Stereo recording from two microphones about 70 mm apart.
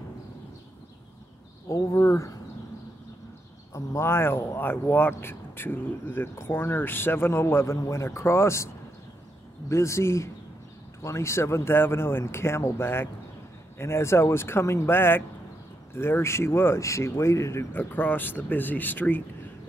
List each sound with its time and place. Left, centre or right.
1.7 s speech: left
3.7 s speech: left
9.7 s speech: left
17.7 s speech: left